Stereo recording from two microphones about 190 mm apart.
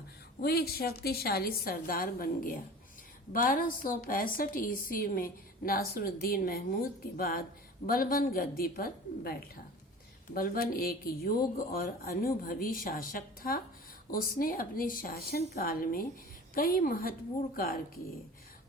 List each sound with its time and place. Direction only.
0.4 s a woman's voice: 55° left (ahead or behind)